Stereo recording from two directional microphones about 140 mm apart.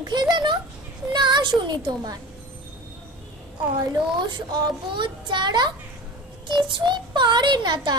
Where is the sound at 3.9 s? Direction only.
35° right (ahead or behind).